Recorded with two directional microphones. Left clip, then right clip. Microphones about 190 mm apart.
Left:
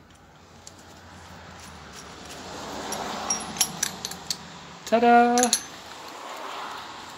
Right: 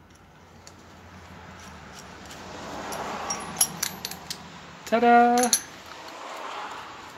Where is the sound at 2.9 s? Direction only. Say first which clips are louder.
Left 2 dB; 60° left (ahead or behind).